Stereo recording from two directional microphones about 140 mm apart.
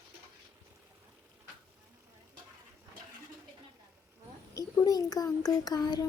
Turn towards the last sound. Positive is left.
turn(degrees=30)  # may be behind; listen again after turning